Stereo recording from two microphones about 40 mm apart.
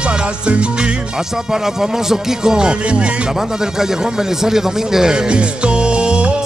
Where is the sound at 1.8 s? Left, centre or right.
Centre.